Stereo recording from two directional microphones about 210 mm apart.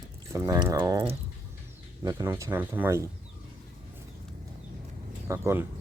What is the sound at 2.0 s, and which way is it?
Speech, 10° right (ahead or behind).